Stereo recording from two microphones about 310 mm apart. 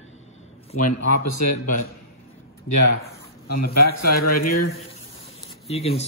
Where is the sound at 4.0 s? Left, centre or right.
Left.